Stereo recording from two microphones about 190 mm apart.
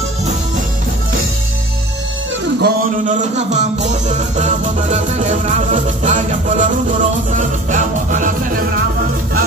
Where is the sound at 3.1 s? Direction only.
40° right (ahead or behind).